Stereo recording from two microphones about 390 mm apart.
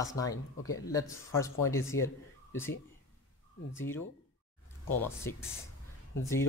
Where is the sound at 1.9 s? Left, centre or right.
Left.